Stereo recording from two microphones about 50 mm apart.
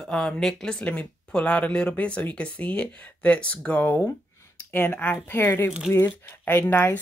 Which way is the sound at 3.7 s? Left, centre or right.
Left.